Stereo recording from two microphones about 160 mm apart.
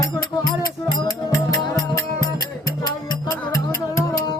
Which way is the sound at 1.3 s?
20° left (ahead or behind).